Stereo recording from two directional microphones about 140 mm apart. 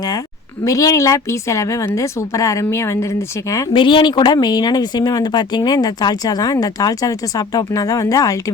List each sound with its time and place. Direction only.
0.6 s speech: 25° left (ahead or behind)
3.7 s speech: 35° left (ahead or behind)